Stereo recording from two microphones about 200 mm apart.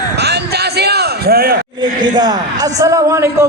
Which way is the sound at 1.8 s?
20° right (ahead or behind).